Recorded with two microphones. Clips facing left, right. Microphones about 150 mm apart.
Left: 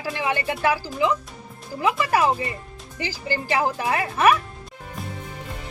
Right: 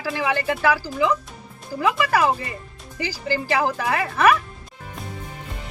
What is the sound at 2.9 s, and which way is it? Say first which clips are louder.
Speech: right 2 dB; 20° left (ahead or behind).